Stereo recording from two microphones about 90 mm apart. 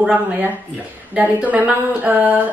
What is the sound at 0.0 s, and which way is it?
A woman's voice, 15° right (ahead or behind).